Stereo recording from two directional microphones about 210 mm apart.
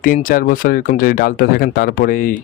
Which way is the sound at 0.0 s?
40° left (ahead or behind).